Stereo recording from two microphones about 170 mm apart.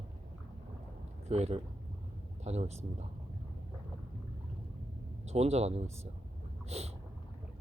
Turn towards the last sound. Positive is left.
turn(degrees=-40)  # may be behind; listen again after turning